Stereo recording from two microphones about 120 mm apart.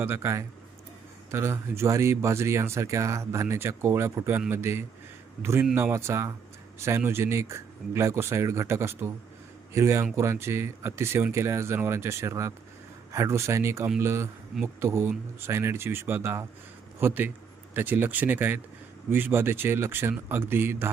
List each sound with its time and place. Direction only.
0.0 s speech: 20° right (ahead or behind)